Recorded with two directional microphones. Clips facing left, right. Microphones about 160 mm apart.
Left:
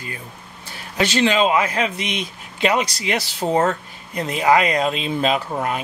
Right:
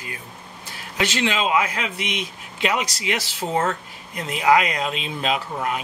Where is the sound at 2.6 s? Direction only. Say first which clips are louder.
Left 4 dB; 35° left (ahead or behind).